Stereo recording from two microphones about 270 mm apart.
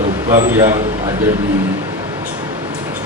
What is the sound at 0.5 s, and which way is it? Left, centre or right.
Speech, centre.